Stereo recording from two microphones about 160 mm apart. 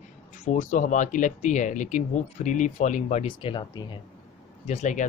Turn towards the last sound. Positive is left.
turn(degrees=50)  # may be behind; listen again after turning